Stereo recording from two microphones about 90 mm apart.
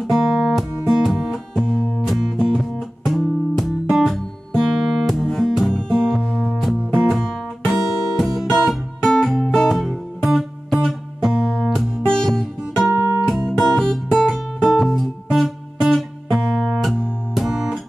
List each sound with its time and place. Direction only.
0.1 s music: 5° right (ahead or behind)
12.9 s music: 35° right (ahead or behind)
13.3 s music: 5° left (ahead or behind)